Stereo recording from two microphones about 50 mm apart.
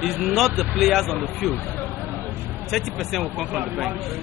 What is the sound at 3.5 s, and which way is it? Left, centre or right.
Speech, right.